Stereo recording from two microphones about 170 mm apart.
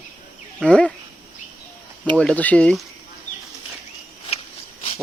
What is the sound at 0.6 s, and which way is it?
Speech, 5° left (ahead or behind).